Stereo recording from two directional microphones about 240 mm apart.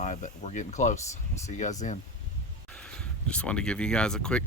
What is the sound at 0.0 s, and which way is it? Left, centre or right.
Speech, left.